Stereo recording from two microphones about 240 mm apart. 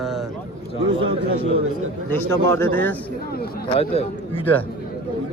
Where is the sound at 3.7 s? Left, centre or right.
Left.